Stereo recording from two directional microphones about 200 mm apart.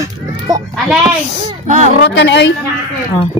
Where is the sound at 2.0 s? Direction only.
60° left (ahead or behind).